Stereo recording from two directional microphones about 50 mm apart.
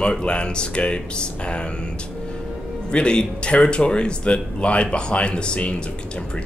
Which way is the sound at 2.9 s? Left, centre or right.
Centre.